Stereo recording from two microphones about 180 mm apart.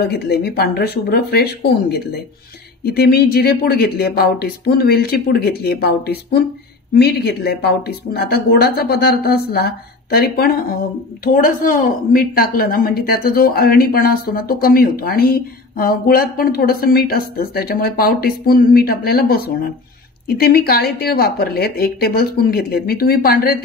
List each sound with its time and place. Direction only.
0.1 s a woman's voice: 65° left (ahead or behind)